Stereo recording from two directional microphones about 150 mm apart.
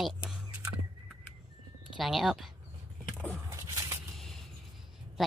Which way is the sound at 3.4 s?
20° right (ahead or behind).